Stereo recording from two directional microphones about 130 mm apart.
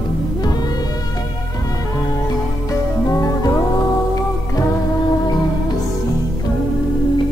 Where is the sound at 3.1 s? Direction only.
25° left (ahead or behind).